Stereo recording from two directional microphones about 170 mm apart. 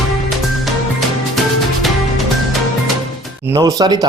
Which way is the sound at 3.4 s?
20° right (ahead or behind).